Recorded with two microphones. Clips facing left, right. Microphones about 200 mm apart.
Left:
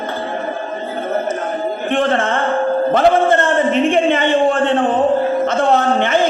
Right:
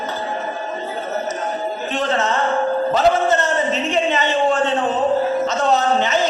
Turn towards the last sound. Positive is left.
turn(degrees=55)  # may be behind; listen again after turning